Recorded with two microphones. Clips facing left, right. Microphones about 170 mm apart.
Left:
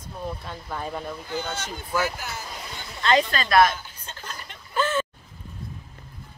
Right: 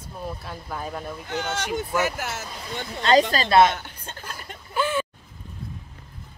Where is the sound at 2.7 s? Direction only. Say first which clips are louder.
Right 3 dB; 35° right (ahead or behind).